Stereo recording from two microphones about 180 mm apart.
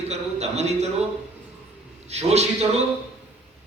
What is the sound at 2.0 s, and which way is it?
Speech, 35° right (ahead or behind).